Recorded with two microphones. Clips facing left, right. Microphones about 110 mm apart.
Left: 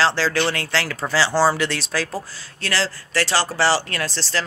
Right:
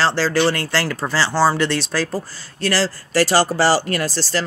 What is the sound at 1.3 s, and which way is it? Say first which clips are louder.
Speech: right 2 dB; 15° left (ahead or behind).